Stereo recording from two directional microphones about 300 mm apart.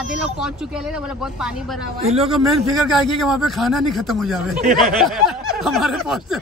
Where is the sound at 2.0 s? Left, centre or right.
Centre.